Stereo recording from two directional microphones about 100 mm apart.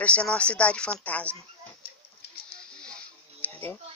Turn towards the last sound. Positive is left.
turn(degrees=20)  # may be behind; listen again after turning